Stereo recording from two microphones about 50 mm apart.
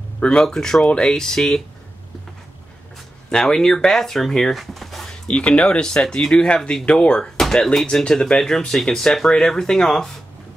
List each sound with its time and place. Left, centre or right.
0.2 s speech: centre
3.3 s speech: centre
4.6 s a sound: centre
5.3 s speech: left
7.3 s speech: centre